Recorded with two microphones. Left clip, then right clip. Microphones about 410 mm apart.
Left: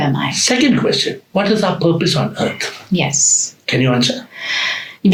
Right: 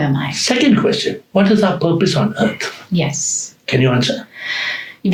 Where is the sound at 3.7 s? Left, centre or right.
Right.